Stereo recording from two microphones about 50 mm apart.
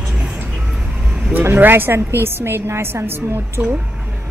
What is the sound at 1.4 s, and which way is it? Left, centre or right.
Speech, right.